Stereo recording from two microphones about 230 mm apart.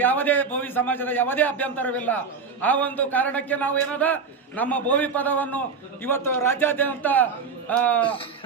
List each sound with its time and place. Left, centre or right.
0.0 s a man's voice: centre
8.0 s speech: left